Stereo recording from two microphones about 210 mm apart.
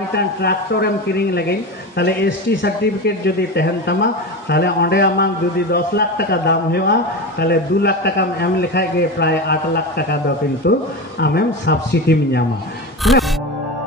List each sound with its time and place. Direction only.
0.1 s speech: 50° left (ahead or behind)
13.0 s speech: centre (ahead or behind)